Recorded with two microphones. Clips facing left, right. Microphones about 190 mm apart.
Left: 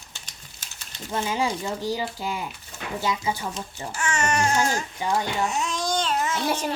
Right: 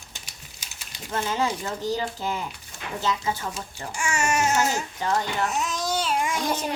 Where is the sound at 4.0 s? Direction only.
10° right (ahead or behind).